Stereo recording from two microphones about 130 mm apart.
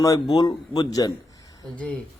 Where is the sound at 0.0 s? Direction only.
30° left (ahead or behind).